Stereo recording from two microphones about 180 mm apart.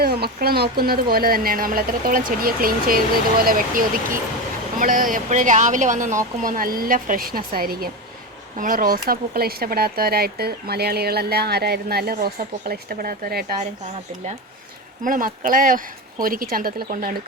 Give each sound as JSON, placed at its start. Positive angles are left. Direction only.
{"t": 0.0, "sound": "speech", "side_deg": -60}
{"t": 15.0, "sound": "speech", "side_deg": -50}